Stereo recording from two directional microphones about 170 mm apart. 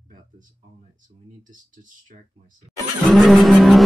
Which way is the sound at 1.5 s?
50° right (ahead or behind).